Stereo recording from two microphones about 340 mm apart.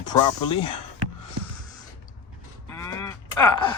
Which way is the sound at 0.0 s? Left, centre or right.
Centre.